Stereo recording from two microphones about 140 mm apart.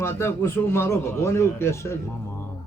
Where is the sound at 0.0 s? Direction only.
20° left (ahead or behind).